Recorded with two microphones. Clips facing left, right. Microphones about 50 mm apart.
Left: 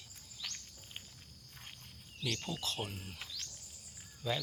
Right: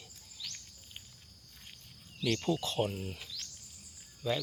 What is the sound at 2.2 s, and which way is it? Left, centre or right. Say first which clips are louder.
Speech: right 7 dB; centre.